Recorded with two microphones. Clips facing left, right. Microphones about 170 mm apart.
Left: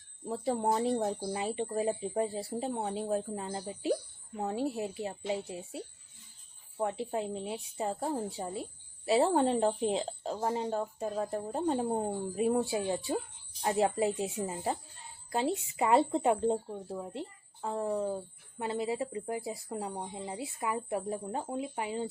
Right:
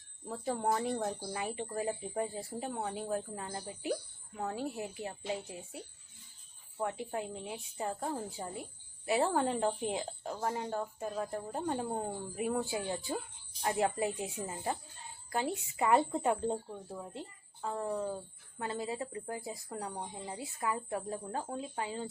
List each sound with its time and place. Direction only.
0.3 s a woman's voice: 25° left (ahead or behind)